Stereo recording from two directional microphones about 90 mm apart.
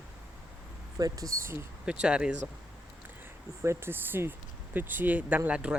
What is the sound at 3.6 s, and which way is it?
Speech, 25° right (ahead or behind).